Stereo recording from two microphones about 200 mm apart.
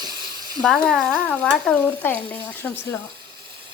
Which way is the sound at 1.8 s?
10° left (ahead or behind).